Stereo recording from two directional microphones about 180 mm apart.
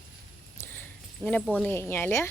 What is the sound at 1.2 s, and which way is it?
Speech, 10° left (ahead or behind).